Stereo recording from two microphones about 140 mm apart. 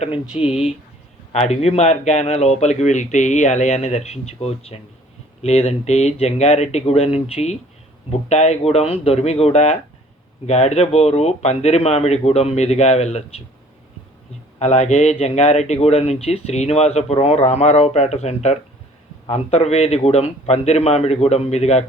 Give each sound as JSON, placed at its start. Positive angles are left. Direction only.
{"t": 0.0, "sound": "a man's voice", "side_deg": 45}
{"t": 14.6, "sound": "a man's voice", "side_deg": 50}